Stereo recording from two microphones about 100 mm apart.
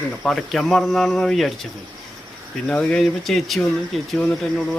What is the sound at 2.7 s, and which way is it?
Speech, 10° left (ahead or behind).